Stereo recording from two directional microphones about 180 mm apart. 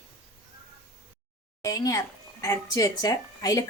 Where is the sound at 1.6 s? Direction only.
20° left (ahead or behind).